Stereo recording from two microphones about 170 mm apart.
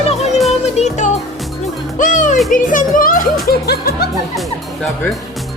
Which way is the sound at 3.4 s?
70° left (ahead or behind).